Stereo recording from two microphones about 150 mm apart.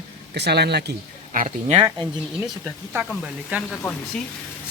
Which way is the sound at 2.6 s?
10° right (ahead or behind).